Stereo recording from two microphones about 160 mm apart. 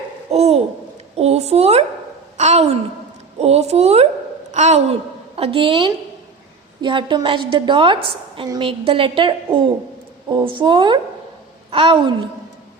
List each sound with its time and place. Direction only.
0.3 s babbling: 40° right (ahead or behind)
1.1 s a woman's voice: 40° right (ahead or behind)
5.4 s a woman's voice: 35° right (ahead or behind)